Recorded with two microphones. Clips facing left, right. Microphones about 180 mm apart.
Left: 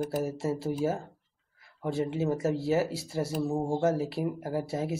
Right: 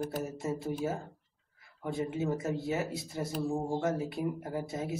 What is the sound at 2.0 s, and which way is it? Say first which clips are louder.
Speech: left 4 dB; 30° left (ahead or behind).